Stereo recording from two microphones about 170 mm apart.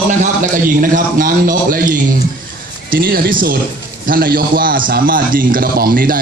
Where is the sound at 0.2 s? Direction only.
50° right (ahead or behind).